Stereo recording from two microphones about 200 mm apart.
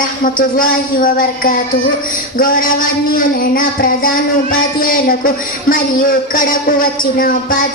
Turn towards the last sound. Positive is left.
turn(degrees=45)  # may be behind; listen again after turning